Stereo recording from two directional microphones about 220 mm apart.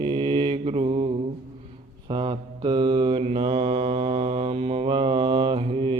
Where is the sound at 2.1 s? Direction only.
20° right (ahead or behind).